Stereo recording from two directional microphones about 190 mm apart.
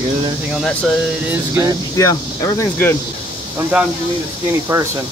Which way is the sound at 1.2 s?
10° right (ahead or behind).